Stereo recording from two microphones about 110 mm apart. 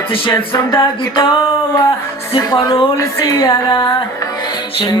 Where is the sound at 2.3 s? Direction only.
35° left (ahead or behind).